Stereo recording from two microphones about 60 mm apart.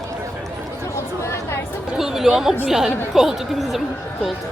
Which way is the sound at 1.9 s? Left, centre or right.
Centre.